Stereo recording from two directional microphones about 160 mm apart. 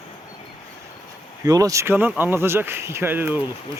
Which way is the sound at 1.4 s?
20° right (ahead or behind).